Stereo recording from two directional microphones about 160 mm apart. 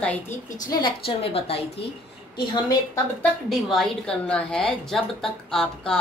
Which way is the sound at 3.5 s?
Centre (ahead or behind).